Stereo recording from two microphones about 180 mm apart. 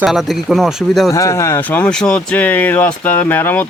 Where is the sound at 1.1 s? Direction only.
15° left (ahead or behind).